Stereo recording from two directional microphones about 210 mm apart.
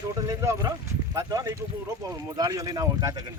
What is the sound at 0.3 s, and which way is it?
Speech, 15° right (ahead or behind).